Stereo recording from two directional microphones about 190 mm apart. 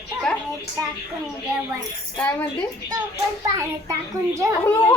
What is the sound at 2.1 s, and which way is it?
Speech, 10° left (ahead or behind).